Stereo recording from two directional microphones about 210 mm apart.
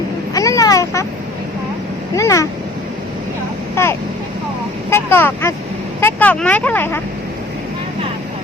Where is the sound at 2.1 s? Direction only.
15° left (ahead or behind).